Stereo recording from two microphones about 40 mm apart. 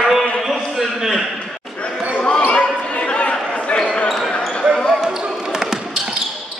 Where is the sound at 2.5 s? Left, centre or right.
Left.